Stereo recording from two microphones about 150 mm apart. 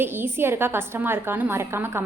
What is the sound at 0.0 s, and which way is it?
A woman's voice, 15° right (ahead or behind).